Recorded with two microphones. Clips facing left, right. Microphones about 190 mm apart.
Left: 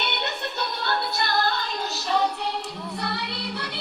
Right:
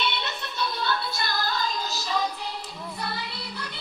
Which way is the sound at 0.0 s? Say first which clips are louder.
Left 1 dB; 60° left (ahead or behind).